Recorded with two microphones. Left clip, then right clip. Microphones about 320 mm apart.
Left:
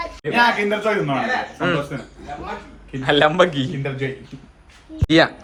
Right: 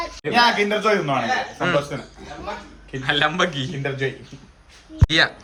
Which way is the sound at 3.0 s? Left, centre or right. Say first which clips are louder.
Left 5 dB; centre.